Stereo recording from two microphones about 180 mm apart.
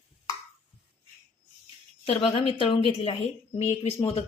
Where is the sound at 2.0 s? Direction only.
35° left (ahead or behind).